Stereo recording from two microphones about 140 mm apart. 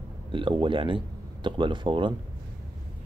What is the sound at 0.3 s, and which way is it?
Speech, 35° right (ahead or behind).